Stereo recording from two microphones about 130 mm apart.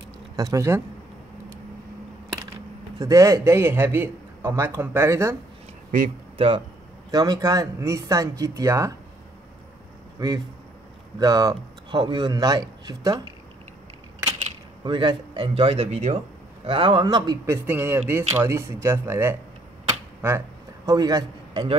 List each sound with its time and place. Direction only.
0.4 s a man's voice: 25° right (ahead or behind)
3.0 s a man's voice: 25° right (ahead or behind)
5.9 s speech: 90° right
6.3 s speech: 45° right (ahead or behind)
7.1 s a man's voice: 30° right (ahead or behind)
10.2 s a man's voice: 25° right (ahead or behind)
14.8 s speech: 35° right (ahead or behind); by 16.2 s 55° right (ahead or behind)
16.6 s a man's voice: 40° right (ahead or behind)
17.5 s a man's voice: 15° right (ahead or behind)
20.2 s a sound: 20° right (ahead or behind)